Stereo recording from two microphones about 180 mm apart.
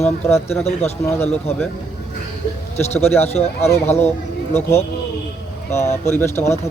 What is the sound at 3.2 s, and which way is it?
Speech, 35° left (ahead or behind).